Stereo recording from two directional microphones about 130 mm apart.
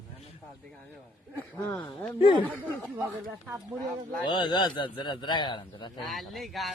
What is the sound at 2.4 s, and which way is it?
Speech, 15° left (ahead or behind).